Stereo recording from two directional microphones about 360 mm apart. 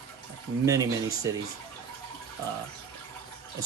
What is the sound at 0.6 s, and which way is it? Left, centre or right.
Speech, centre.